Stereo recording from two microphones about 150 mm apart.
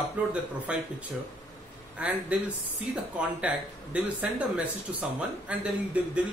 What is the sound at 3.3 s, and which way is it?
A man's voice, 10° right (ahead or behind).